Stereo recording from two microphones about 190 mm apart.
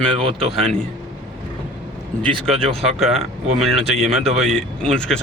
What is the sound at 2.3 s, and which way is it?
Speech, 30° right (ahead or behind).